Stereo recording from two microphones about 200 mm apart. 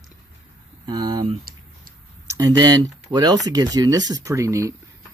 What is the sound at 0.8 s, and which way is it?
Speech, 20° right (ahead or behind).